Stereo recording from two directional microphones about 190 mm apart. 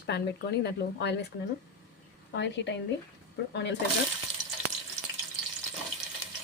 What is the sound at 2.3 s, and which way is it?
A woman's voice, 70° left (ahead or behind).